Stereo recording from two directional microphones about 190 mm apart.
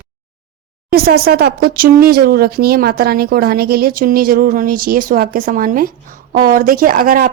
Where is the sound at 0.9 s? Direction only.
55° right (ahead or behind).